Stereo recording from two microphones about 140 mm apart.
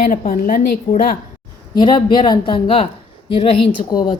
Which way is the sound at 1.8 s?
35° left (ahead or behind).